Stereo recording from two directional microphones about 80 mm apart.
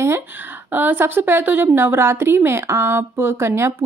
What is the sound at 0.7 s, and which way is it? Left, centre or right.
A woman's voice, right.